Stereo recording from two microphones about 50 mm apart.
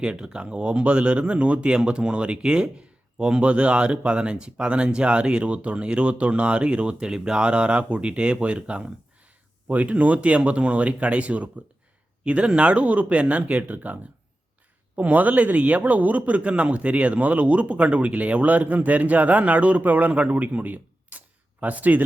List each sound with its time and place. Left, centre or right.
0.0 s a man's voice: centre